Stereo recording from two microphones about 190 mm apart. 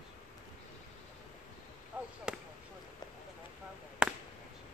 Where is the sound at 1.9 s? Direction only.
10° right (ahead or behind).